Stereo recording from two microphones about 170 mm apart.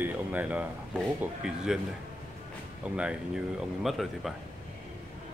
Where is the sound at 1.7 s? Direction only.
5° right (ahead or behind).